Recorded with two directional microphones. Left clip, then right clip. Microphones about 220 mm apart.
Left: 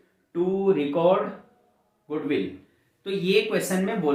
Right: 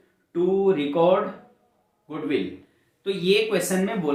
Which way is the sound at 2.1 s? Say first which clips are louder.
Even; centre (ahead or behind).